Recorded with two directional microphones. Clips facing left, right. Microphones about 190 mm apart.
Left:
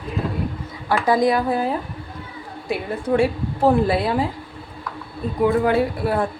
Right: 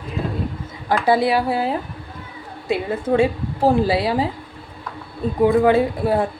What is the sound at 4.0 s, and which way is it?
Speech, 10° right (ahead or behind).